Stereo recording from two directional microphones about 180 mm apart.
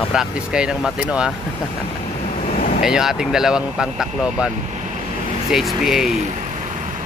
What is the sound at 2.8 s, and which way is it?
Speech, 5° right (ahead or behind).